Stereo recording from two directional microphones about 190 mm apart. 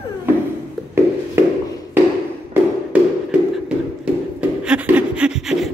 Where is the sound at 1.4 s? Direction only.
15° right (ahead or behind).